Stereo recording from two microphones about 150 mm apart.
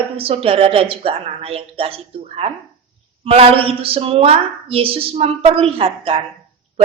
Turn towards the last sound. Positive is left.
turn(degrees=-40)  # may be behind; listen again after turning